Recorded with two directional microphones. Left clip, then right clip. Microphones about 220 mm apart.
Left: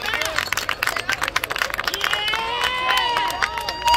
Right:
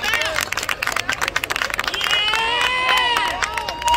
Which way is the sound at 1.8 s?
55° right (ahead or behind).